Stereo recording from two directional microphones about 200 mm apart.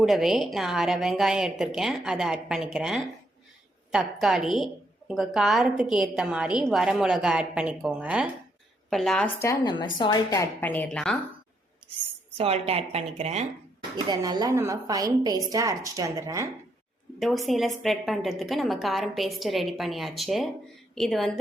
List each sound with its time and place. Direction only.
0.0 s a woman's voice: centre (ahead or behind)
12.4 s speech: 30° right (ahead or behind)
13.9 s a woman's voice: 20° right (ahead or behind)
17.2 s a woman's voice: centre (ahead or behind)